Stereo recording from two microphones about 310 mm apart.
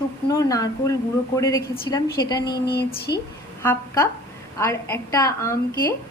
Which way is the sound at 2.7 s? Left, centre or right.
Left.